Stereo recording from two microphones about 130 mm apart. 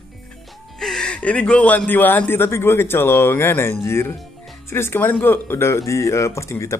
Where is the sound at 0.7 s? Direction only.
5° left (ahead or behind).